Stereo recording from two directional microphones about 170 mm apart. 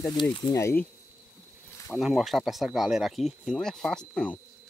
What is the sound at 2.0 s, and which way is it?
Speech, centre (ahead or behind).